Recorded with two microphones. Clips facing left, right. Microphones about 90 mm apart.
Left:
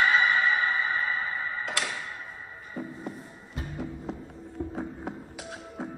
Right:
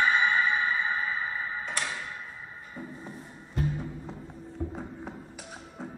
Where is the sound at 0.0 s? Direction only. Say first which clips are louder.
Left 1 dB; 90° left.